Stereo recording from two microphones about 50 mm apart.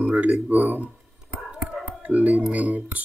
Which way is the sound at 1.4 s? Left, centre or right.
Right.